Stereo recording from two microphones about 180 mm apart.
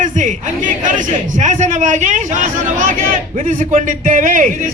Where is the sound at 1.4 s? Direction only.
45° right (ahead or behind).